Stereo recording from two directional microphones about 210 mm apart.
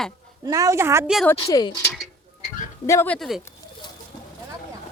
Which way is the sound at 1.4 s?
20° left (ahead or behind).